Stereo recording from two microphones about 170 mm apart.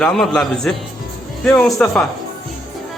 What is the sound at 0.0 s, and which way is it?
Speech, 5° left (ahead or behind).